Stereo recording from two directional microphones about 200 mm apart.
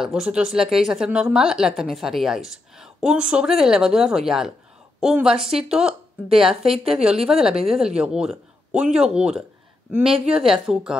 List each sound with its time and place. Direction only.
0.0 s speech: centre (ahead or behind)
6.6 s a woman's voice: 30° right (ahead or behind)
7.0 s speech: 5° right (ahead or behind)